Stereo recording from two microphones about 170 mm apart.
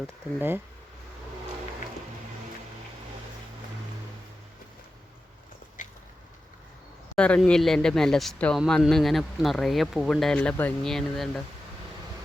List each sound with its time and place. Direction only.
0.3 s speech: 10° right (ahead or behind)
5.8 s a sound: 50° left (ahead or behind)
7.2 s speech: 5° left (ahead or behind)